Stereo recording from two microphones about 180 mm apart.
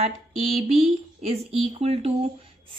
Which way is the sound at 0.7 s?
35° right (ahead or behind).